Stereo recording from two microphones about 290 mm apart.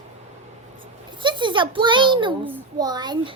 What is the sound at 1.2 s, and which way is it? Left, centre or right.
A child's voice, centre.